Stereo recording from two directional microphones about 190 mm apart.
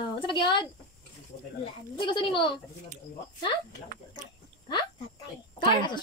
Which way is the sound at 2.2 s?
25° left (ahead or behind).